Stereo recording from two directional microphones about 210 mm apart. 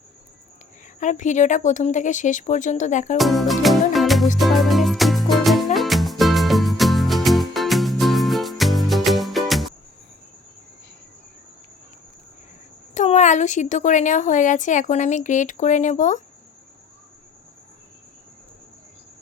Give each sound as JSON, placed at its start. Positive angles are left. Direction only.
{"t": 0.9, "sound": "speech", "side_deg": 35}
{"t": 3.2, "sound": "music", "side_deg": 0}
{"t": 12.9, "sound": "speech", "side_deg": 35}